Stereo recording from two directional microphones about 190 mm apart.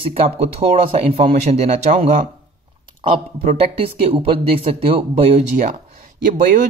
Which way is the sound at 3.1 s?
30° right (ahead or behind).